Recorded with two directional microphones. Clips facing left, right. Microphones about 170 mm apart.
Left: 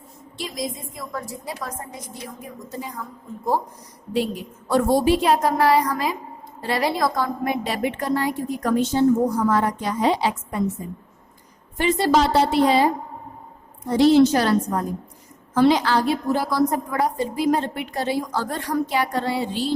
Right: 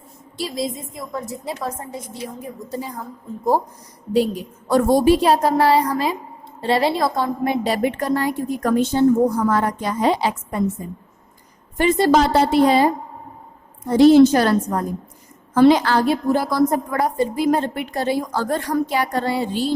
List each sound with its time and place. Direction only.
0.3 s a woman's voice: 30° right (ahead or behind)
4.7 s a woman's voice: 40° right (ahead or behind)
11.8 s a woman's voice: 50° right (ahead or behind)
13.9 s a woman's voice: 50° right (ahead or behind)